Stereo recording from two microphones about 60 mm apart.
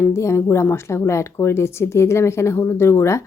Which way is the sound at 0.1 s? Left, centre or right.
Left.